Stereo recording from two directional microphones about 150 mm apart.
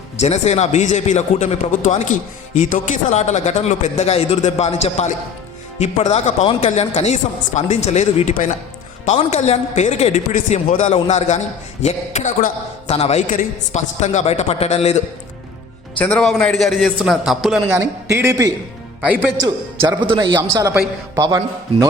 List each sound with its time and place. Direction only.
0.2 s a man's voice: 45° left (ahead or behind)
16.0 s a man's voice: 5° left (ahead or behind)
17.7 s a man's voice: 15° right (ahead or behind)
19.0 s a man's voice: 10° right (ahead or behind)
19.9 s a man's voice: 30° right (ahead or behind)
20.3 s a man's voice: 20° right (ahead or behind)